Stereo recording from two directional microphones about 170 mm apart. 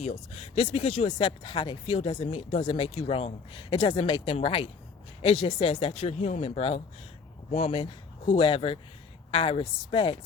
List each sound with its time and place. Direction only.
0.0 s speech: 40° left (ahead or behind)